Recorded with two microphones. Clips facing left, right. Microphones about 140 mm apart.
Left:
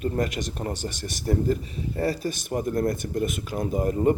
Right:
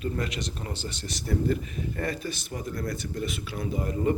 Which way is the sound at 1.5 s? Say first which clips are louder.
Left 2 dB; 30° left (ahead or behind).